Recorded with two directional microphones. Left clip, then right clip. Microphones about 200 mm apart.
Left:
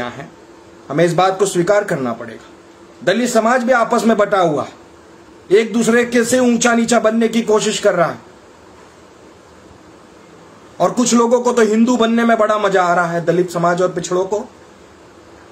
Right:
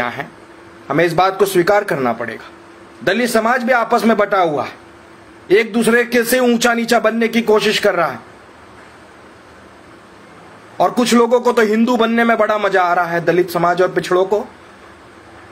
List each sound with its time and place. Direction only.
0.8 s a man's voice: 5° left (ahead or behind)
5.5 s a man's voice: 5° left (ahead or behind)
11.1 s a man's voice: 5° left (ahead or behind)